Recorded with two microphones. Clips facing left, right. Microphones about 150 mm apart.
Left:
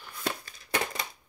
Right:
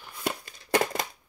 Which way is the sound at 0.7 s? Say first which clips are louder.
Right 6 dB; 40° right (ahead or behind).